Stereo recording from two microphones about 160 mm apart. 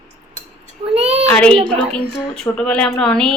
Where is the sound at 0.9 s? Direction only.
40° right (ahead or behind).